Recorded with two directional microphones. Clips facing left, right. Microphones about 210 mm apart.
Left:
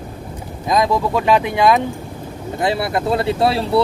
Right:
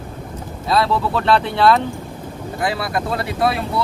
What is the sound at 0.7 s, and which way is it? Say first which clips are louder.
Speech: left 2 dB; 15° left (ahead or behind).